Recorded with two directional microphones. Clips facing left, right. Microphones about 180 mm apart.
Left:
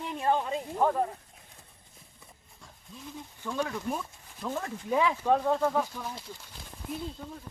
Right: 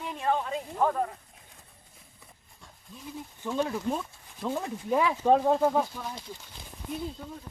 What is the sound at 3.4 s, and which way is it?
Speech, 15° right (ahead or behind).